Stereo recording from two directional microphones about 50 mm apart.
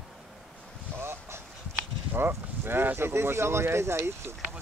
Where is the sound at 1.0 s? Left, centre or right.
Right.